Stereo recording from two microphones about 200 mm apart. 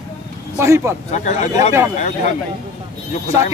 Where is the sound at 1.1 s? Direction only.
35° left (ahead or behind).